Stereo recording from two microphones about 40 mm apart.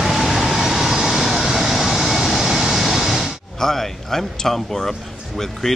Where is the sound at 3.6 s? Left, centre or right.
Centre.